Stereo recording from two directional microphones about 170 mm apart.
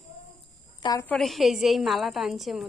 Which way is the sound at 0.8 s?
20° left (ahead or behind).